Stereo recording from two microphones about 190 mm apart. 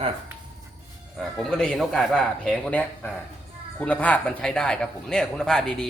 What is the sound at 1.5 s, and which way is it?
A man's voice, 5° left (ahead or behind).